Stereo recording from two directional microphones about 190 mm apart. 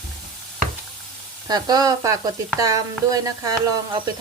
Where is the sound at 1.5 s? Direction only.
20° right (ahead or behind).